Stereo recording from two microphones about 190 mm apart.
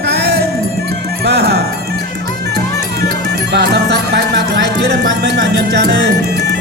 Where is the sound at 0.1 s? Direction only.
60° right (ahead or behind).